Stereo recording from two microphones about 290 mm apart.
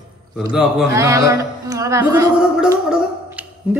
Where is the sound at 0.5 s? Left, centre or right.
Centre.